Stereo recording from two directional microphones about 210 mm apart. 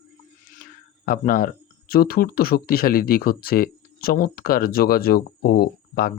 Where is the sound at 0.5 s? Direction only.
40° left (ahead or behind).